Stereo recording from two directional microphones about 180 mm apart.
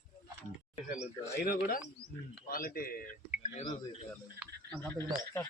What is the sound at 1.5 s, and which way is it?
A man's voice, 50° left (ahead or behind).